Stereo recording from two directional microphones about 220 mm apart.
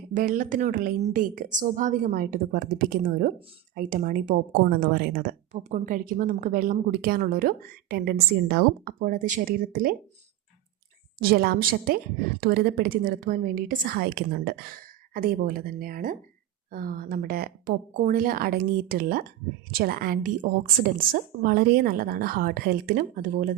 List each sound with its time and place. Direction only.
0.1 s speech: 35° right (ahead or behind)
5.5 s speech: 30° right (ahead or behind)
11.2 s a woman's voice: 45° right (ahead or behind)